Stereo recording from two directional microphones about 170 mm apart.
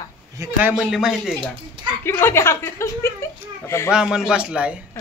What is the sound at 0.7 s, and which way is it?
Speech, 5° right (ahead or behind).